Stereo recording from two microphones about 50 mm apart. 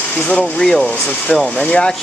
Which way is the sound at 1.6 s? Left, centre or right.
Centre.